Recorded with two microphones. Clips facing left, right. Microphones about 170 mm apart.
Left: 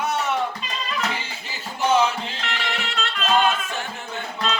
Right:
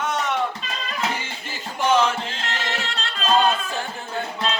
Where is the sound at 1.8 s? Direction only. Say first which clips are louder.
Even; 10° left (ahead or behind).